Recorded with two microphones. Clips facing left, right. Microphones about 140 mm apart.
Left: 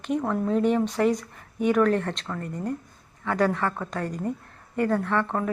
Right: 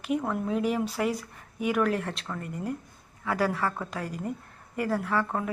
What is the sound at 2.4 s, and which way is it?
Speech, 40° left (ahead or behind).